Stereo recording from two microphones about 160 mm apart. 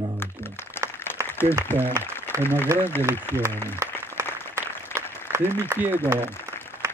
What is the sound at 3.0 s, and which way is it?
Speech, 15° right (ahead or behind).